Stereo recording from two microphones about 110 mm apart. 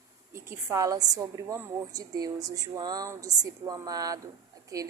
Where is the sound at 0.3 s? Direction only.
25° right (ahead or behind).